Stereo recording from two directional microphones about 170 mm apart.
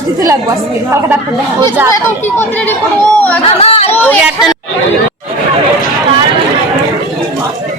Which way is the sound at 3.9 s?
10° left (ahead or behind).